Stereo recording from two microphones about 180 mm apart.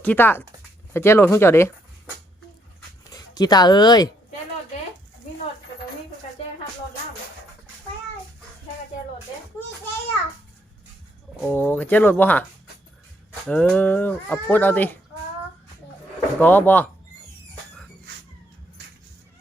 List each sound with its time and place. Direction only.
0.0 s speech: 10° left (ahead or behind)
3.1 s speech: 20° left (ahead or behind)
11.4 s speech: 10° left (ahead or behind)
13.5 s speech: 5° left (ahead or behind)
16.4 s speech: 10° left (ahead or behind)